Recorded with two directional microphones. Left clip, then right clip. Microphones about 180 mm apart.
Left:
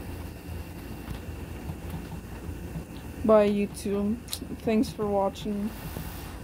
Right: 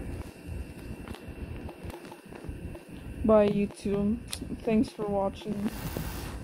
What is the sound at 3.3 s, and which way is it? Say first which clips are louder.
Speech: left 2 dB; 20° left (ahead or behind).